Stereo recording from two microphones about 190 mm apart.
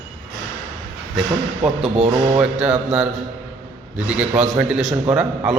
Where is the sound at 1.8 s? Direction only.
30° right (ahead or behind).